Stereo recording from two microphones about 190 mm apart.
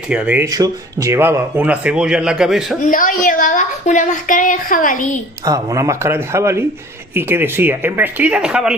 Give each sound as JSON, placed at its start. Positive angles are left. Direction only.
{"t": 0.1, "sound": "speech", "side_deg": -5}
{"t": 2.8, "sound": "a woman's voice", "side_deg": 45}
{"t": 5.5, "sound": "speech", "side_deg": -15}